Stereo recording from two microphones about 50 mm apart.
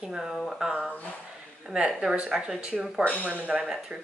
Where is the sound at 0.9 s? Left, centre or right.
Left.